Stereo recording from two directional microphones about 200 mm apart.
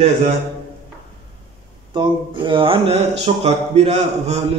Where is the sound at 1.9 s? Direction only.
25° right (ahead or behind).